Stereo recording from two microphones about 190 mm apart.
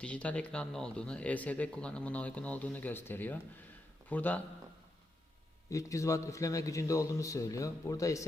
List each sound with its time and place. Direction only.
0.0 s speech: 5° left (ahead or behind)
5.7 s speech: 15° left (ahead or behind)